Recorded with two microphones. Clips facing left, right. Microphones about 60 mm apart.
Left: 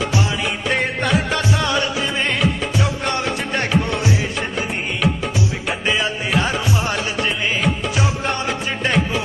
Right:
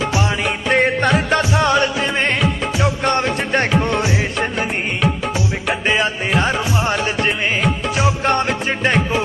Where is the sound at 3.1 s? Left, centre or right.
Right.